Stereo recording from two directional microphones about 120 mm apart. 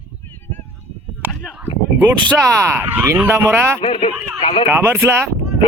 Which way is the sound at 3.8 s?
55° left (ahead or behind).